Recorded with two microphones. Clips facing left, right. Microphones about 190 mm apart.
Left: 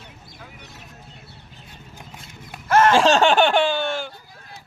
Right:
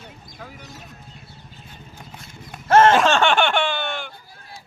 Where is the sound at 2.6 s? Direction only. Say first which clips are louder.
Right 3 dB; 25° right (ahead or behind).